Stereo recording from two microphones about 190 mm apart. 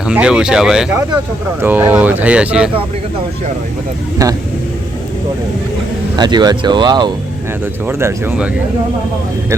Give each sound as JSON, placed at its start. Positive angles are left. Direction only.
{"t": 0.0, "sound": "speech", "side_deg": -5}
{"t": 4.2, "sound": "speech", "side_deg": -15}
{"t": 6.1, "sound": "speech", "side_deg": -20}
{"t": 7.9, "sound": "speech", "side_deg": -15}